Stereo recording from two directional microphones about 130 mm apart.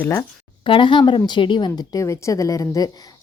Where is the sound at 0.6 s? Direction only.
40° left (ahead or behind).